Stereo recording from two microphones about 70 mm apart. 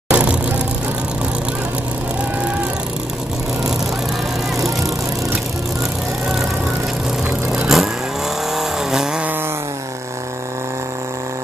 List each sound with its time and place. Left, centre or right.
0.1 s vehicle: centre
7.2 s vehicle: centre